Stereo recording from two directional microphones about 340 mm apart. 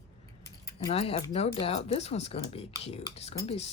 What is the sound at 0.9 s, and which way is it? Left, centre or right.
Speech, centre.